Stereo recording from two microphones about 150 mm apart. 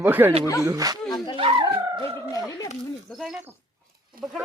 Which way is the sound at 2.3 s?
25° left (ahead or behind).